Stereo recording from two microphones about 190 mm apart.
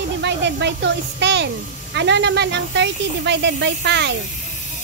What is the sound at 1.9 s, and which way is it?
Speech, 65° right (ahead or behind).